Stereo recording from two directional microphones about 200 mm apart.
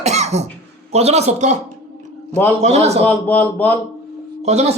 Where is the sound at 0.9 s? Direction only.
30° right (ahead or behind).